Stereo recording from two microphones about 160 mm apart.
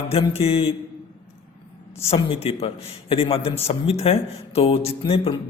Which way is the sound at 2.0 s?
40° left (ahead or behind).